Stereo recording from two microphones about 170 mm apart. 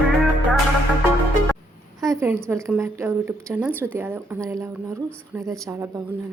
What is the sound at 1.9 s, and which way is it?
A woman's voice, 15° right (ahead or behind).